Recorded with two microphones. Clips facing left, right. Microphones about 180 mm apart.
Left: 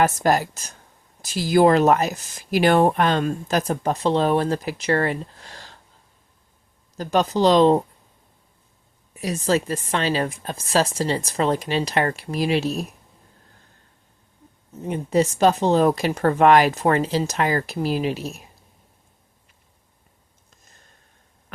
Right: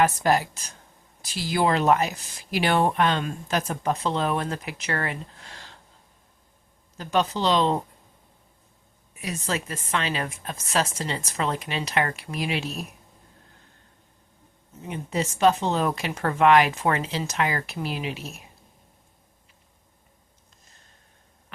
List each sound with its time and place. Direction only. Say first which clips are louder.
0.0 s speech: left 2 dB; 45° left (ahead or behind)
6.9 s speech: left 4 dB; 40° left (ahead or behind)
9.1 s speech: left 8 dB; 35° left (ahead or behind)
14.8 s speech: left 8 dB; 40° left (ahead or behind)